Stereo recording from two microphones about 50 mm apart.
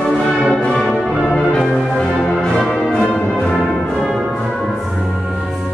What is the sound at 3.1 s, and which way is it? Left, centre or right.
Music, centre.